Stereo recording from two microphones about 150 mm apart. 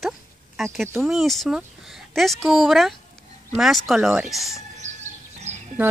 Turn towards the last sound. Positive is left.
turn(degrees=-50)  # may be behind; listen again after turning